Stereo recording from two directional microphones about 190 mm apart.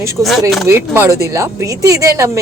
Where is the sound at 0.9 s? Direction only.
15° right (ahead or behind).